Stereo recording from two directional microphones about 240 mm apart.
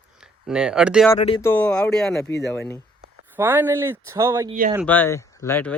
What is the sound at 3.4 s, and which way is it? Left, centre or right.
Speech, centre.